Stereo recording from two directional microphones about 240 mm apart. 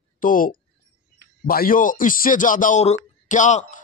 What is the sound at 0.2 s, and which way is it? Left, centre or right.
Speech, left.